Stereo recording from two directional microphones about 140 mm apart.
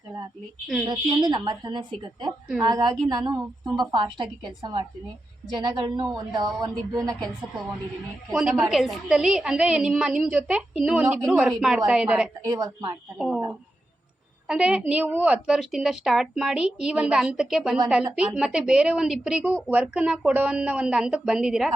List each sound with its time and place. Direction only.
0.9 s a woman's voice: 30° right (ahead or behind)
8.3 s a woman's voice: 5° right (ahead or behind)
12.5 s a woman's voice: 25° right (ahead or behind)
13.1 s a woman's voice: 5° right (ahead or behind)
14.4 s a woman's voice: 5° right (ahead or behind)